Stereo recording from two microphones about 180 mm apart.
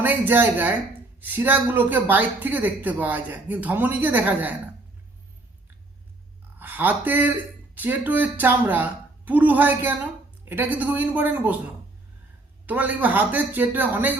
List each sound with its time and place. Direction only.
0.0 s speech: 10° right (ahead or behind)
6.6 s speech: 10° right (ahead or behind)
12.6 s speech: 10° right (ahead or behind)